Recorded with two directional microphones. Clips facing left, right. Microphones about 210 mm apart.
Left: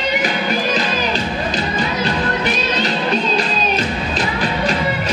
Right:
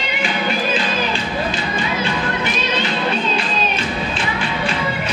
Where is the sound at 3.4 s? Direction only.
40° left (ahead or behind).